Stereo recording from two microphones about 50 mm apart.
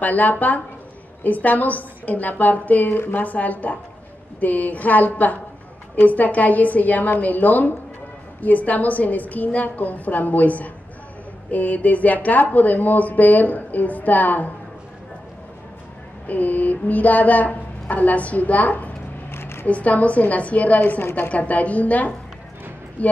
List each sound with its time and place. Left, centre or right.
0.0 s speech: left
3.0 s a woman's voice: left
3.3 s speech: left
16.3 s speech: left
19.3 s a sound: left
19.6 s speech: left
21.0 s a woman's voice: left
21.3 s speech: left